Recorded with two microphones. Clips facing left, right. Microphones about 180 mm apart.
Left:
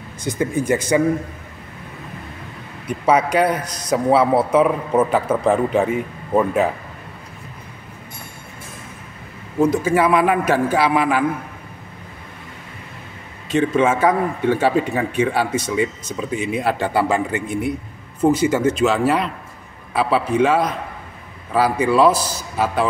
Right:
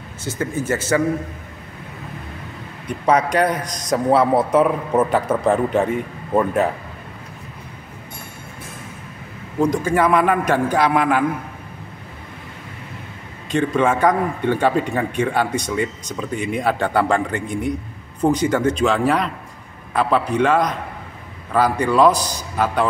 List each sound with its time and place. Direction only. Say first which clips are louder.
0.2 s speech: left 3 dB; 15° left (ahead or behind)
2.9 s a man's voice: left 1 dB; 5° left (ahead or behind)
9.6 s a man's voice: left 1 dB; 5° left (ahead or behind)
13.5 s a man's voice: left 1 dB; 5° left (ahead or behind)